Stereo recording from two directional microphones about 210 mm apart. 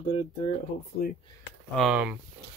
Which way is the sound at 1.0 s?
45° left (ahead or behind).